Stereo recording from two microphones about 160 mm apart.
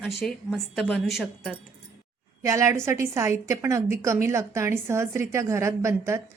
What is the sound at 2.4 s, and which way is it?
A woman's voice, 20° right (ahead or behind).